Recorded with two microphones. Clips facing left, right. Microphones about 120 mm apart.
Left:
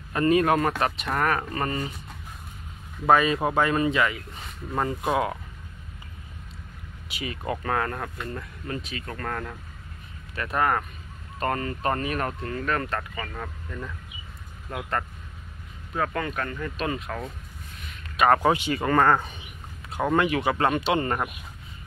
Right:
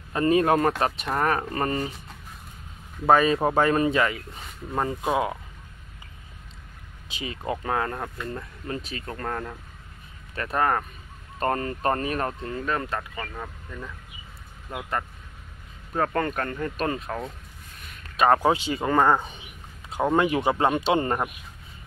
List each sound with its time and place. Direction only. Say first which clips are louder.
0.1 s speech: even; 25° right (ahead or behind)
3.1 s speech: right 1 dB; 35° right (ahead or behind)
4.7 s speech: even; 20° right (ahead or behind)
7.1 s speech: even; 25° right (ahead or behind)
12.3 s speech: even; 20° right (ahead or behind)
13.1 s speech: even; 5° right (ahead or behind)
15.9 s speech: right 3 dB; 40° right (ahead or behind)
18.3 s speech: even; 15° right (ahead or behind)
20.0 s speech: right 1 dB; 20° right (ahead or behind)
20.5 s speech: right 1 dB; 15° right (ahead or behind)